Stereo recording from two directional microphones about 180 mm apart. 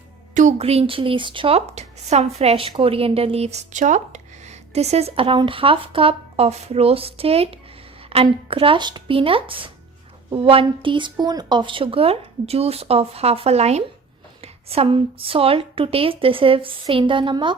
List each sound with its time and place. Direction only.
0.3 s speech: 40° right (ahead or behind)